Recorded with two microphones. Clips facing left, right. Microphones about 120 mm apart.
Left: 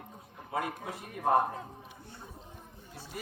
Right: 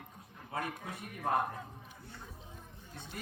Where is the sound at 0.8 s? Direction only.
30° left (ahead or behind).